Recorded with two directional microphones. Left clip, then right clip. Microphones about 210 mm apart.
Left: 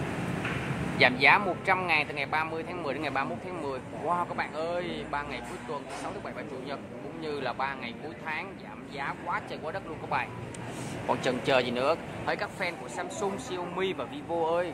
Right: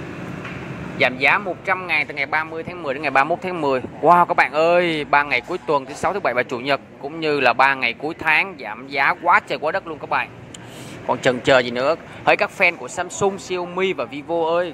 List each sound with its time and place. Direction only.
0.9 s speech: 10° right (ahead or behind)
12.3 s speech: 30° right (ahead or behind)